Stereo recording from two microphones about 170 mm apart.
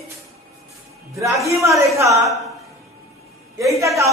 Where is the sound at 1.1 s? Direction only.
20° right (ahead or behind).